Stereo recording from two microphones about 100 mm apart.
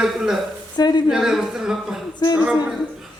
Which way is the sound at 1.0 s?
5° right (ahead or behind).